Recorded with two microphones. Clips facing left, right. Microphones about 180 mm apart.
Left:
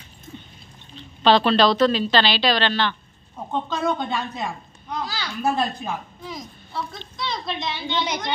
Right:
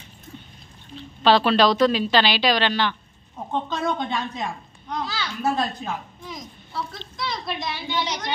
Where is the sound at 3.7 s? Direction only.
5° left (ahead or behind).